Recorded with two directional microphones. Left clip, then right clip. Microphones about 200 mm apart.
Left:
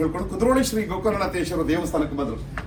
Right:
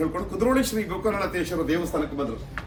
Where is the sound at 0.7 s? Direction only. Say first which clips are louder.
Left 2 dB; 15° left (ahead or behind).